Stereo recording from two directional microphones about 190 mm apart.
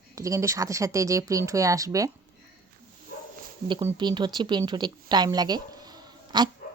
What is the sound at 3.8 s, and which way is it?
Speech, 25° right (ahead or behind).